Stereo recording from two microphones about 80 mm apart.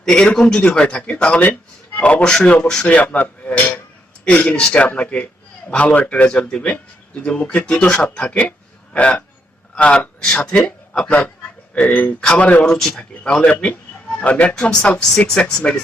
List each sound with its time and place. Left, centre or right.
0.0 s a man's voice: centre